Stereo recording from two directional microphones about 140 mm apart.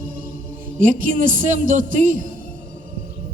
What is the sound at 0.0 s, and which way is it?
Music, 80° right.